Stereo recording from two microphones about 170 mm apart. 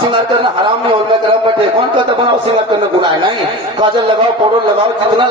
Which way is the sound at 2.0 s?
30° right (ahead or behind).